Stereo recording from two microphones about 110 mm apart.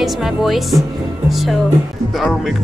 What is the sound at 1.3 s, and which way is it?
Speech, centre (ahead or behind).